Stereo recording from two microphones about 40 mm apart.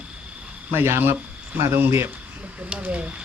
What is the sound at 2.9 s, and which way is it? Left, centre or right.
Speech, right.